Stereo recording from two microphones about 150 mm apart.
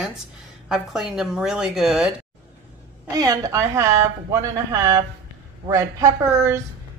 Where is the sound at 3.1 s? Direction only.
25° right (ahead or behind).